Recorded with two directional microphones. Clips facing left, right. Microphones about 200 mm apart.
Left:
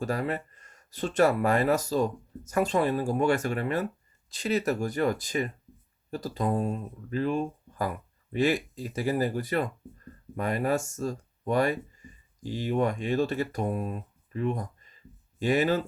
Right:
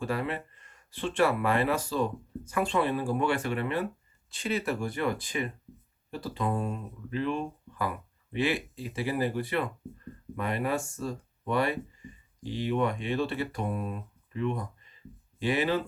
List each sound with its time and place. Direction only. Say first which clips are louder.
0.0 s speech: left 2 dB; 40° left (ahead or behind)